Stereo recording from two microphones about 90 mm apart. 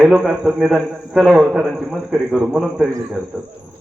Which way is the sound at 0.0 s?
5° right (ahead or behind).